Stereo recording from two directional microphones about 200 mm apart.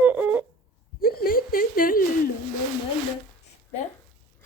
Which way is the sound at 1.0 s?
45° left (ahead or behind).